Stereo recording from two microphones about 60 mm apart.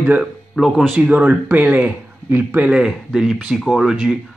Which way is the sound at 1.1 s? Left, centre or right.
Centre.